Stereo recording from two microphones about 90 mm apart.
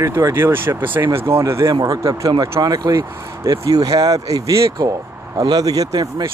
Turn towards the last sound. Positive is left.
turn(degrees=-45)  # may be behind; listen again after turning